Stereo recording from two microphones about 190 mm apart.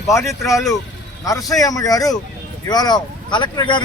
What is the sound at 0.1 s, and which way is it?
A man's voice, 15° left (ahead or behind).